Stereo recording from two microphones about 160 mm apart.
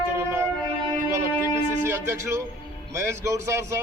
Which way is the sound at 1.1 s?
15° right (ahead or behind).